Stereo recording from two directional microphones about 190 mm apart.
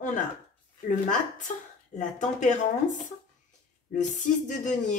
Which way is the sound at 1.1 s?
40° left (ahead or behind).